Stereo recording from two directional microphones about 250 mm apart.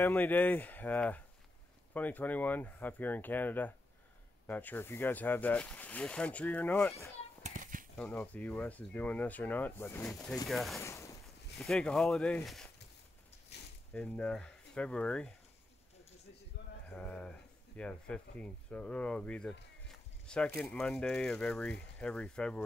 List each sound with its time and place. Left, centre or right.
0.0 s speech: centre
7.4 s a sound: right
8.0 s speech: centre
10.8 s speech: centre
11.5 s speech: centre
13.5 s zipper: left
13.9 s speech: centre
16.6 s a sound: left
16.9 s speech: centre